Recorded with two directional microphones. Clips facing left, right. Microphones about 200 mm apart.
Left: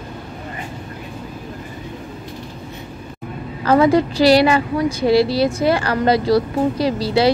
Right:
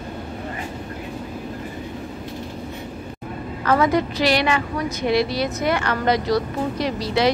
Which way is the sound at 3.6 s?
30° left (ahead or behind).